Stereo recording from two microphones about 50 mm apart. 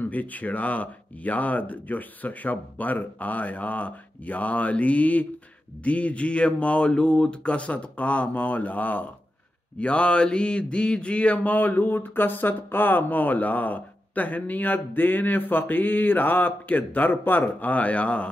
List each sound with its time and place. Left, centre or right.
0.0 s mantra: left
5.9 s speech: left
9.8 s mantra: left